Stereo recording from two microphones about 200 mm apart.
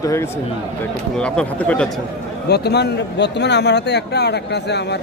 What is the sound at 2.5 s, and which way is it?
A man's voice, 55° left (ahead or behind).